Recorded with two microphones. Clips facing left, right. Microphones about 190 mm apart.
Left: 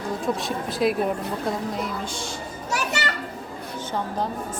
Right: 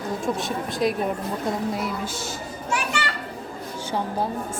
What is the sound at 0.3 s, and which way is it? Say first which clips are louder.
Speech: even; centre (ahead or behind).